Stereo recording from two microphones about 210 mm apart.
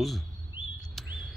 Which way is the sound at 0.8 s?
Centre (ahead or behind).